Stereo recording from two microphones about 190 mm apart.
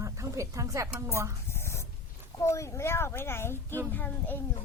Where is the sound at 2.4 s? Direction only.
15° left (ahead or behind).